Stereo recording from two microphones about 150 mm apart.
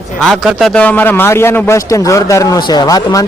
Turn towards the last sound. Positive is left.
turn(degrees=25)  # may be behind; listen again after turning